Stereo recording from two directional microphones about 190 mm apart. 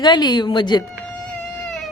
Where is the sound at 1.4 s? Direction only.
Centre (ahead or behind).